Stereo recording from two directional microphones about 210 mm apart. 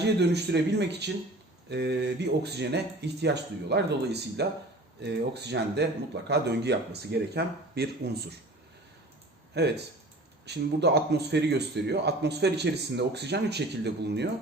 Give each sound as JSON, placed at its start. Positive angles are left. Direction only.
{"t": 0.0, "sound": "a man's voice", "side_deg": -55}
{"t": 9.5, "sound": "a man's voice", "side_deg": -55}